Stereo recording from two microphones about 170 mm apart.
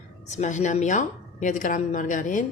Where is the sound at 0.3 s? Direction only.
45° left (ahead or behind).